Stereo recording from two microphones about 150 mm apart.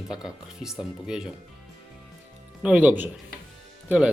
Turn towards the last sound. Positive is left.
turn(degrees=-10)  # may be behind; listen again after turning